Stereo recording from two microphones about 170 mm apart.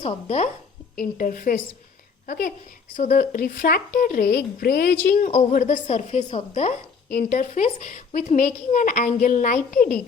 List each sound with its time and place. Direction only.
0.0 s speech: 40° left (ahead or behind)
0.9 s speech: 55° left (ahead or behind)
5.0 s a woman's voice: 50° left (ahead or behind)
7.1 s a woman's voice: 55° left (ahead or behind)